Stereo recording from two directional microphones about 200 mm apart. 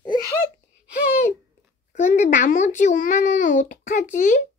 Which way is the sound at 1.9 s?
35° left (ahead or behind).